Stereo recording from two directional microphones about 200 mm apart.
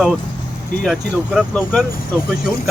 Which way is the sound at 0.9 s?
5° right (ahead or behind).